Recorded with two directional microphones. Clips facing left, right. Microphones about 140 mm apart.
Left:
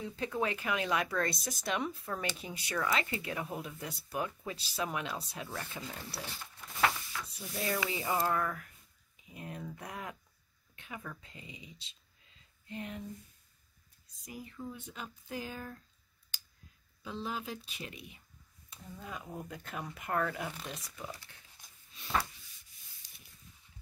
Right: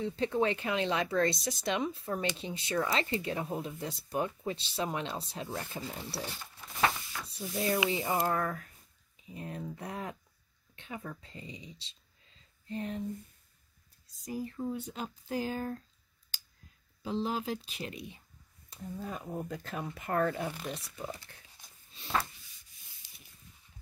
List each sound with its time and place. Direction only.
0.0 s speech: 30° right (ahead or behind)
6.8 s a sound: 10° right (ahead or behind)
7.3 s speech: 30° right (ahead or behind)
12.6 s a sound: 35° right (ahead or behind)
14.2 s speech: 35° right (ahead or behind)
17.0 s speech: 30° right (ahead or behind)
20.5 s speech: 5° right (ahead or behind)
21.3 s speech: 45° right (ahead or behind)